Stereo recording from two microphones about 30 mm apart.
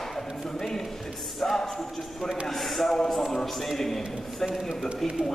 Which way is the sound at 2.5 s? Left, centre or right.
Centre.